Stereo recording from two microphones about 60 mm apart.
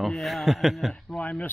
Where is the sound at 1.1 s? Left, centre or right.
Left.